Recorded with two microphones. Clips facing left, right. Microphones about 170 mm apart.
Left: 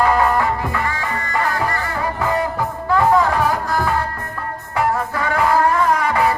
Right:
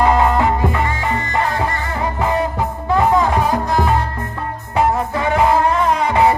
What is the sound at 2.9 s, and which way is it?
Music, 20° right (ahead or behind).